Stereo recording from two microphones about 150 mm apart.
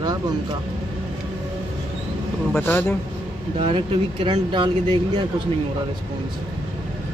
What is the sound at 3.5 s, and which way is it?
Speech, 35° right (ahead or behind).